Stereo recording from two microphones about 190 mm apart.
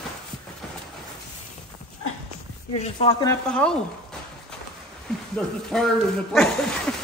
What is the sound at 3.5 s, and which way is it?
Speech, 5° left (ahead or behind).